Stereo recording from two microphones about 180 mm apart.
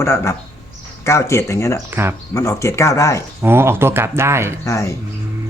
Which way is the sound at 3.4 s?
15° right (ahead or behind).